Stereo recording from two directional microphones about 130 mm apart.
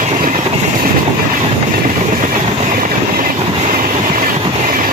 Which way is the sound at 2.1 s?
80° right.